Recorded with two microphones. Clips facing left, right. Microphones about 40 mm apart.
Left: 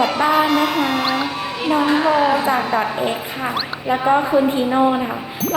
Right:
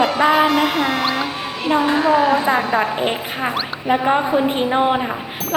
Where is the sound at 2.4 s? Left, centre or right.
Right.